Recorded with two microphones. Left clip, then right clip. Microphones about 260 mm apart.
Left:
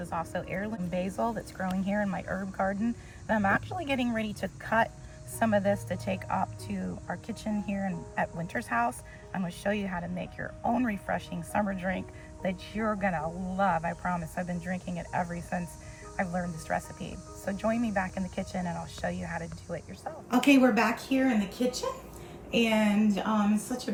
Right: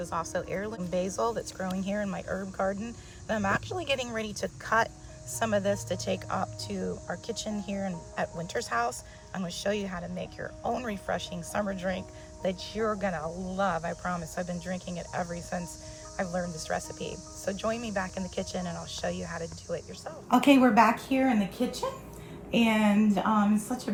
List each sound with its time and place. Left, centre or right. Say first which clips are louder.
0.0 s speech: right 2 dB; centre
22.5 s speech: right 1 dB; centre